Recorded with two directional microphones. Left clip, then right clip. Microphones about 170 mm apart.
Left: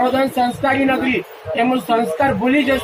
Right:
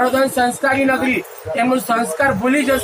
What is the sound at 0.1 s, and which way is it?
Speech, 15° right (ahead or behind).